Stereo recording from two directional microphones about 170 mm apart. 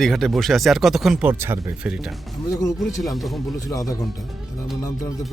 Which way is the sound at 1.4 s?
15° right (ahead or behind).